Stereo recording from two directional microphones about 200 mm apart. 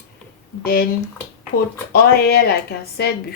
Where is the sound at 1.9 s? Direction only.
50° left (ahead or behind).